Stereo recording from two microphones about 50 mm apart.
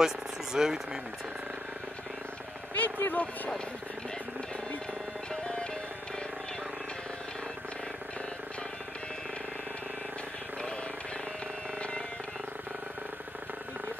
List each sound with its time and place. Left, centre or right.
0.0 s speech: centre
2.7 s speech: left
5.3 s music: centre